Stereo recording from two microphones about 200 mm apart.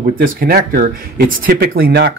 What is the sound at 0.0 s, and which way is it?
Speech, 45° right (ahead or behind).